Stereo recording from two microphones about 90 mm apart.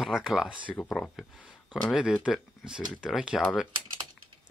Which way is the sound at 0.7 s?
20° left (ahead or behind).